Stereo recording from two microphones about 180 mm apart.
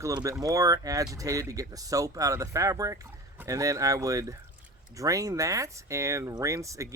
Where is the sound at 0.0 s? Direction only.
20° right (ahead or behind).